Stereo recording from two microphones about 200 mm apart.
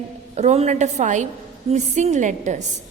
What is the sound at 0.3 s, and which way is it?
A woman's voice, 35° right (ahead or behind).